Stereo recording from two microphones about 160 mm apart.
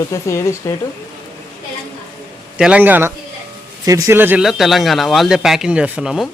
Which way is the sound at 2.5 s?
5° right (ahead or behind).